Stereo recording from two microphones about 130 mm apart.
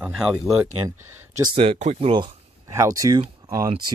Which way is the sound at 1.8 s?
55° right (ahead or behind).